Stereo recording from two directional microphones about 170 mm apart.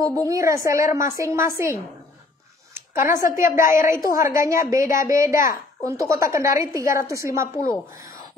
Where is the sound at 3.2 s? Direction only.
50° left (ahead or behind).